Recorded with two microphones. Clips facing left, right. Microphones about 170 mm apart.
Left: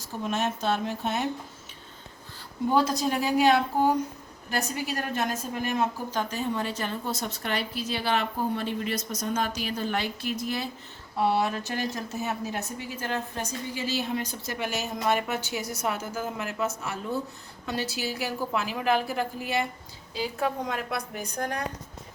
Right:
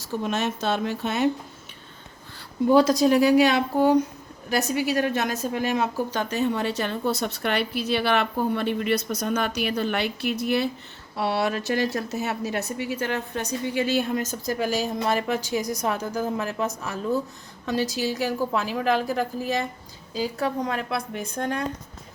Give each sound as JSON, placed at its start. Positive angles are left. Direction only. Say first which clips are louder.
{"t": 0.0, "sound": "speech", "louder": "right 3 dB", "side_deg": -75}
{"t": 2.7, "sound": "a woman's voice", "louder": "right 7 dB", "side_deg": -85}
{"t": 11.2, "sound": "a woman's voice", "louder": "right 1 dB", "side_deg": -75}
{"t": 17.9, "sound": "a woman's voice", "louder": "right 6 dB", "side_deg": -40}